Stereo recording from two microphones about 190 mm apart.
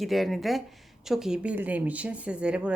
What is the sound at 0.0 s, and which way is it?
A woman's voice, centre (ahead or behind).